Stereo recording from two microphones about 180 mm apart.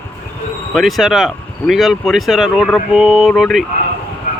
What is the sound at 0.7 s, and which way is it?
Speech, centre (ahead or behind).